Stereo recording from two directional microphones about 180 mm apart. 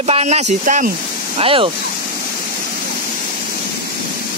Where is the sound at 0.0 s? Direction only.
35° right (ahead or behind).